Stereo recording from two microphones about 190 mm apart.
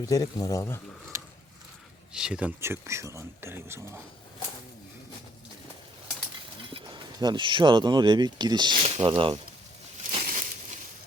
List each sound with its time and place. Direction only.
0.0 s speech: 20° left (ahead or behind)
2.1 s speech: 5° right (ahead or behind)
6.7 s speech: 25° right (ahead or behind)
10.1 s a sound: 35° right (ahead or behind)